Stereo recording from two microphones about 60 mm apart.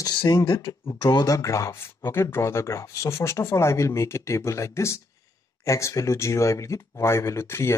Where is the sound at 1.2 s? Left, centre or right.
Left.